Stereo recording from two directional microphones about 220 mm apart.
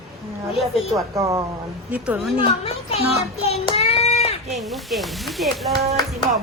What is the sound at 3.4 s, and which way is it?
Child singing, 30° left (ahead or behind).